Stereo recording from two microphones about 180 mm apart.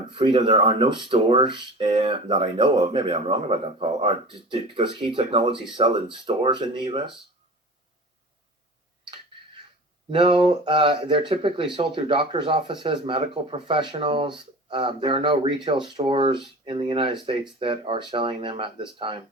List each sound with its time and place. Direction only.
0.1 s speech: 30° right (ahead or behind)
10.1 s speech: 30° right (ahead or behind)